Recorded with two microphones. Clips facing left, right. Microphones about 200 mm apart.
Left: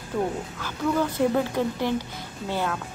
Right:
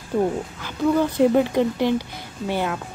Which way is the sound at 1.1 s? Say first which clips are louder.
Right 6 dB; 15° right (ahead or behind).